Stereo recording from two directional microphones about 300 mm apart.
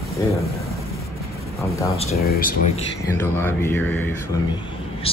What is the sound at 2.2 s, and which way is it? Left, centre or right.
Speech, left.